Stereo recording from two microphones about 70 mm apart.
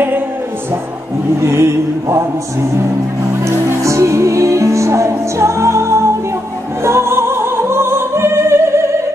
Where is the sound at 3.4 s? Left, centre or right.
Right.